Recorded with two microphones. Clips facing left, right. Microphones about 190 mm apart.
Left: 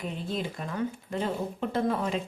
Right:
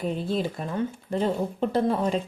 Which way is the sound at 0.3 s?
30° right (ahead or behind).